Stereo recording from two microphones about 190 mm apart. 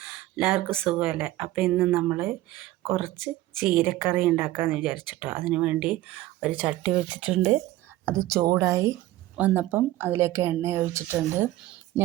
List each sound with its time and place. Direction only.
0.0 s speech: 5° right (ahead or behind)
8.1 s speech: 15° right (ahead or behind)